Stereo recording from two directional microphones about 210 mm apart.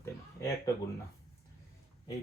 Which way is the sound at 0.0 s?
15° left (ahead or behind).